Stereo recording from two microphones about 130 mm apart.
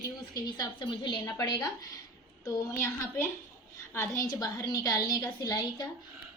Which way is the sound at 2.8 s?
20° left (ahead or behind).